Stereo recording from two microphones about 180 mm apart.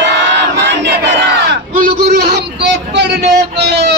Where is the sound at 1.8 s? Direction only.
65° right (ahead or behind).